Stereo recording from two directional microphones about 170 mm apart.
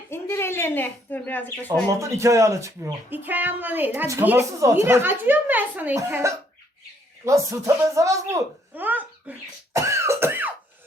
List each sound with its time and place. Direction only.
0.1 s speech: 15° left (ahead or behind)
1.9 s speech: 15° right (ahead or behind)
9.7 s cough: 15° right (ahead or behind)